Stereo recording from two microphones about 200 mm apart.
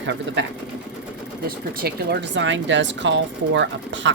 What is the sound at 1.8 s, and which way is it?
Speech, 50° right (ahead or behind).